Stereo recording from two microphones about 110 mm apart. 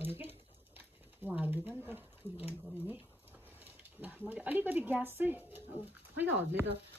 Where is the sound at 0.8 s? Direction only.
15° right (ahead or behind).